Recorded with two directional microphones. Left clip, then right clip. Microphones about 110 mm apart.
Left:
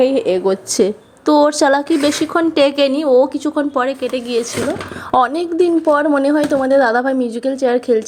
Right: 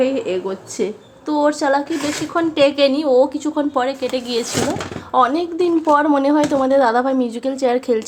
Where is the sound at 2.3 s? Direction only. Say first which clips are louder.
Right 1 dB; 45° left (ahead or behind); by 4.2 s 20° left (ahead or behind).